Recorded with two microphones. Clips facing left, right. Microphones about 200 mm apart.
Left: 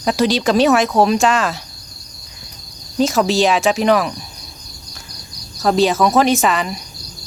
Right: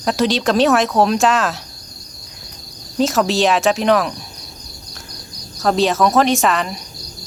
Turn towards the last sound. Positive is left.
turn(degrees=0)  # may be behind; listen again after turning